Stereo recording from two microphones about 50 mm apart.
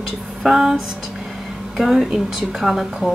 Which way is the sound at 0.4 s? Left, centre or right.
Centre.